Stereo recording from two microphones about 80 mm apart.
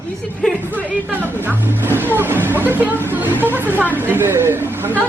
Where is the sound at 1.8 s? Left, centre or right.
Right.